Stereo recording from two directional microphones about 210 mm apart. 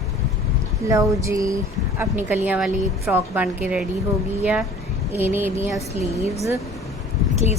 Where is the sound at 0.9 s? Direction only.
15° right (ahead or behind).